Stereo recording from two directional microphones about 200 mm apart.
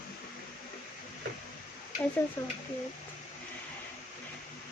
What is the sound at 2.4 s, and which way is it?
Speech, 15° left (ahead or behind).